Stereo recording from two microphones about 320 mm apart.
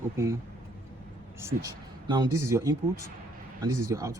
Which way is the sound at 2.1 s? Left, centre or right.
Centre.